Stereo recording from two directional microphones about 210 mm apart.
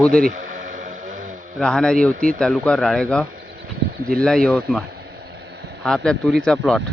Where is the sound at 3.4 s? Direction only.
65° right (ahead or behind).